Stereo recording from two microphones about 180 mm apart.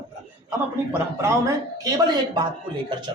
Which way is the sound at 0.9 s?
15° right (ahead or behind).